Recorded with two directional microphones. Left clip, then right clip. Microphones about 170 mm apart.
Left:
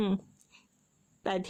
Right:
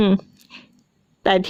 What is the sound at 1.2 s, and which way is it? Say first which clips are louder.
Speech: right 15 dB; 35° right (ahead or behind).